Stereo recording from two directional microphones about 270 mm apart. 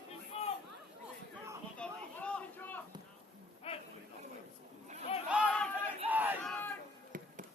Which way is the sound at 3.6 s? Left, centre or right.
Left.